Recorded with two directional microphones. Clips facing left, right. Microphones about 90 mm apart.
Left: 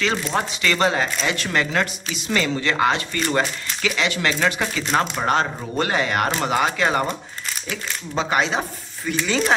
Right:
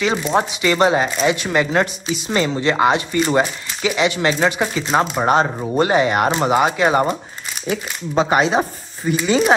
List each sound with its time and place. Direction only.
0.0 s speech: 15° right (ahead or behind)
7.7 s speech: 45° right (ahead or behind)
8.3 s speech: 10° right (ahead or behind)